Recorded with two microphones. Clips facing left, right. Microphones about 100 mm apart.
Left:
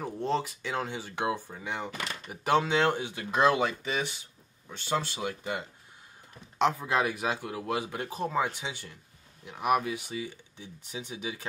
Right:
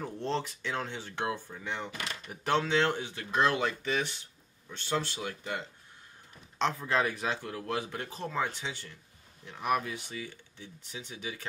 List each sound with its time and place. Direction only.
0.0 s speech: 10° left (ahead or behind)